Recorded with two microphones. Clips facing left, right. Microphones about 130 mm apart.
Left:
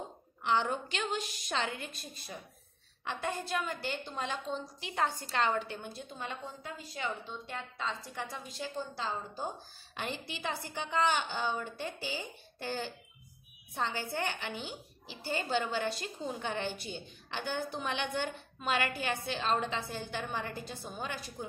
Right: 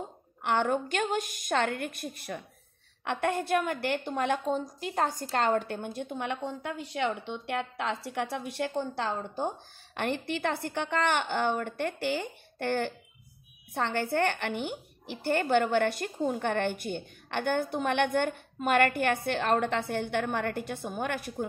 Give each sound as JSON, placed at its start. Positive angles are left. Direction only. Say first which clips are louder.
{"t": 0.4, "sound": "a woman's voice", "louder": "right 4 dB", "side_deg": -55}